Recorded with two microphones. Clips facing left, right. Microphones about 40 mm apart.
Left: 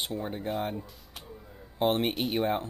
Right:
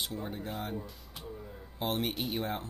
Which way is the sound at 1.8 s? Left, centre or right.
Left.